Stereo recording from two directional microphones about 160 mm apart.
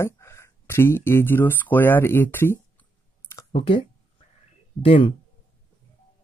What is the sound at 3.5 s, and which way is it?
Speech, 35° left (ahead or behind).